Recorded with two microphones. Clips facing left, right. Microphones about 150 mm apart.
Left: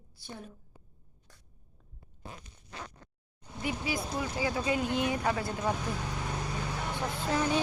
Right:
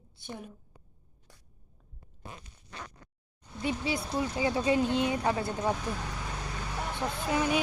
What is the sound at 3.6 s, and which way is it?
Speech, 25° right (ahead or behind).